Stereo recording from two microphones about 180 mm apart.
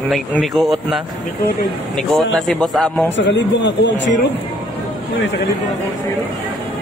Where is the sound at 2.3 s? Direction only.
Centre (ahead or behind).